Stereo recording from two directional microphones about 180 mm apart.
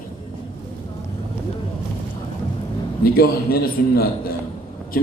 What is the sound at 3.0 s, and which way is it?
A man's voice, 55° left (ahead or behind).